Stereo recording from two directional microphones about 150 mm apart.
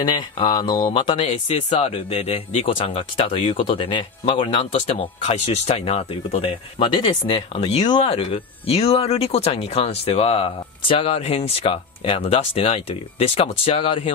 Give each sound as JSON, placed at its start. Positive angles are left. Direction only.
{"t": 0.0, "sound": "speech", "side_deg": 45}
{"t": 4.7, "sound": "speech", "side_deg": 50}